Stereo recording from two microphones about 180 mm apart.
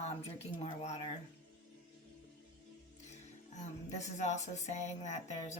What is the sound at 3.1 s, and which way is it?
Speech, 40° left (ahead or behind).